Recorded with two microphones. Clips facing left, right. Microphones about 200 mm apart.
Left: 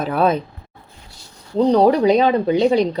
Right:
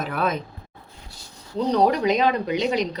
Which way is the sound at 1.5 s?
30° left (ahead or behind).